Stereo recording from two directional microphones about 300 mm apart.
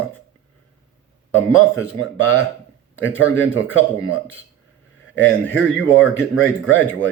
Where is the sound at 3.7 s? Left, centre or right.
Left.